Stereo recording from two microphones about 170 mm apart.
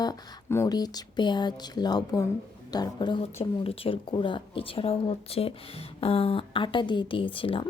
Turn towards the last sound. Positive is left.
turn(degrees=30)  # may be behind; listen again after turning